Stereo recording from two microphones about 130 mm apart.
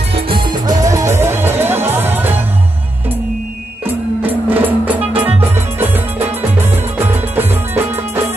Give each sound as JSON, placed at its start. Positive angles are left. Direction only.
{"t": 0.1, "sound": "music", "side_deg": -40}
{"t": 3.8, "sound": "music", "side_deg": -15}